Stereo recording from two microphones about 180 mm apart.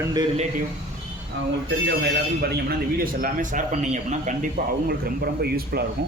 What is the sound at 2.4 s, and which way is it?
A man's voice, 60° right (ahead or behind).